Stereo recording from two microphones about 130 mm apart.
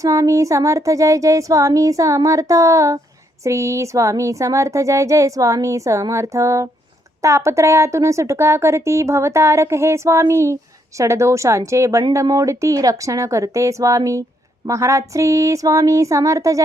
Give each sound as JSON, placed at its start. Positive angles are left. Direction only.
{"t": 0.0, "sound": "speech", "side_deg": -25}